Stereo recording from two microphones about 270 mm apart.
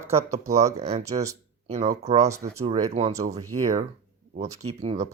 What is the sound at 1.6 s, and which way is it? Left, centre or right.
Speech, right.